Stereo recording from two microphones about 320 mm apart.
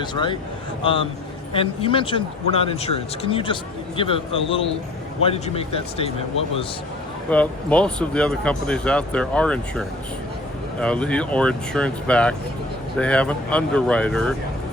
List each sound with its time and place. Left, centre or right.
0.0 s speech: centre
7.3 s speech: centre